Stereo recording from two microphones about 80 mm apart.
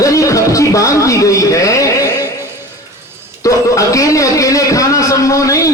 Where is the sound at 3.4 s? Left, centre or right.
Left.